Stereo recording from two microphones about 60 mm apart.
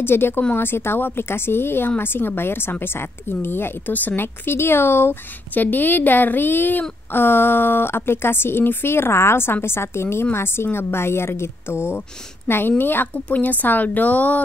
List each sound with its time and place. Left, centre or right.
0.0 s a woman's voice: left
5.5 s a woman's voice: left